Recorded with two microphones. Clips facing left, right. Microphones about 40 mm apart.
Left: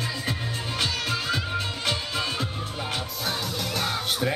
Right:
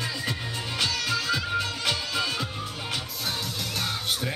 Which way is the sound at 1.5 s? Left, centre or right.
Centre.